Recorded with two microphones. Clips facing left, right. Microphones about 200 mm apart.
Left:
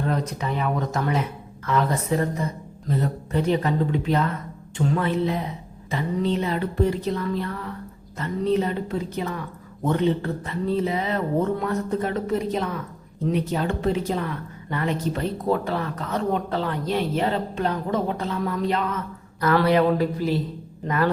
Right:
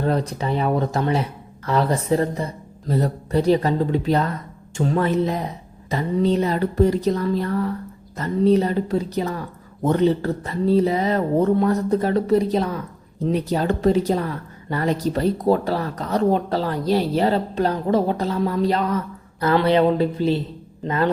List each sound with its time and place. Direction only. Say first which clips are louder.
0.0 s a woman's voice: right 4 dB; 30° right (ahead or behind)